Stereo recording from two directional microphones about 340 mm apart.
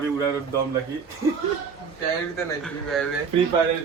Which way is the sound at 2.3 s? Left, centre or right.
Centre.